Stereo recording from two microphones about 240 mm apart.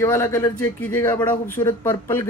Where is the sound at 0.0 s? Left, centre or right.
Centre.